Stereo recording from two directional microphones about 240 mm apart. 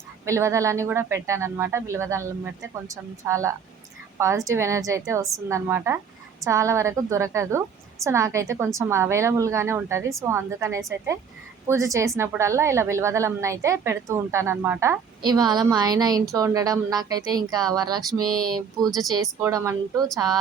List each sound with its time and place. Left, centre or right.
0.3 s a woman's voice: centre